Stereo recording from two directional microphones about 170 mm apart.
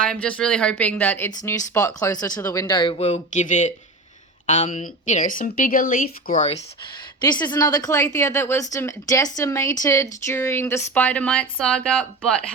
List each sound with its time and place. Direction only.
0.0 s speech: 5° left (ahead or behind); by 6.4 s 55° left (ahead or behind)
7.2 s speech: 25° left (ahead or behind); by 12.4 s 5° left (ahead or behind)